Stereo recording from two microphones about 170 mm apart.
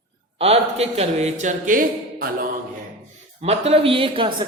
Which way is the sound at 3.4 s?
35° right (ahead or behind).